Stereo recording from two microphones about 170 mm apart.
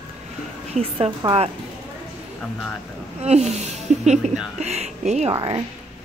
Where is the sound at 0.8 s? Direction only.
35° right (ahead or behind).